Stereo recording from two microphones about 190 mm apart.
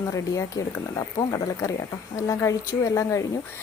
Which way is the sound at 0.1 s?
20° left (ahead or behind).